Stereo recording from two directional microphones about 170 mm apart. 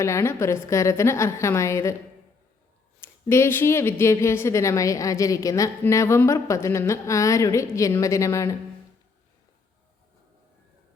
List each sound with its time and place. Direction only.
0.0 s a woman's voice: 15° left (ahead or behind)
3.0 s a woman's voice: 15° left (ahead or behind)